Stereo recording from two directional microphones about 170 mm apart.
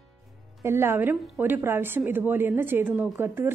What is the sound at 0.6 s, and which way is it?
A woman's voice, 15° right (ahead or behind).